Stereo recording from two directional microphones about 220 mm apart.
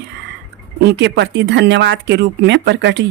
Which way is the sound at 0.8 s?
50° right (ahead or behind).